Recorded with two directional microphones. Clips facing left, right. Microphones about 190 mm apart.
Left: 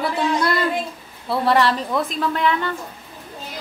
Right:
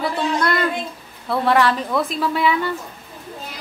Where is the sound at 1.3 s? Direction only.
Centre (ahead or behind).